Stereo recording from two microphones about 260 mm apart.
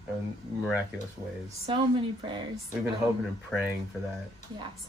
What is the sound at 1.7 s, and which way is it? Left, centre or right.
Speech, centre.